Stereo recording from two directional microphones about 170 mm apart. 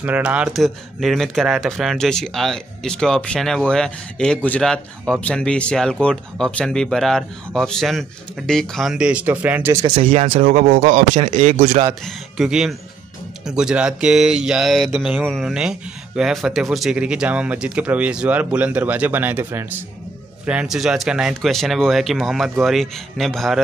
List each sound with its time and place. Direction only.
0.0 s speech: 10° right (ahead or behind)
9.8 s speech: 35° right (ahead or behind)
12.4 s speech: 5° right (ahead or behind)